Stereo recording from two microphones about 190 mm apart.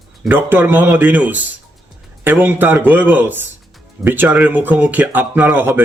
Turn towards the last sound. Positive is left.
turn(degrees=-10)  # may be behind; listen again after turning